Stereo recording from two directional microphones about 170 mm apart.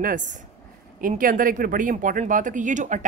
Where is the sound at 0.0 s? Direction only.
50° right (ahead or behind).